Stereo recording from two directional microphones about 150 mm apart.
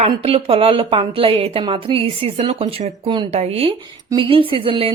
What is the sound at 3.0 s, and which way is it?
Speech, 30° right (ahead or behind).